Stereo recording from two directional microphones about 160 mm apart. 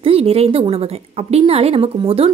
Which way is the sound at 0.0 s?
40° right (ahead or behind).